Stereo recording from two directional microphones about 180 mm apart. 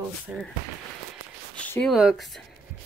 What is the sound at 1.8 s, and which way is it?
Speech, centre (ahead or behind).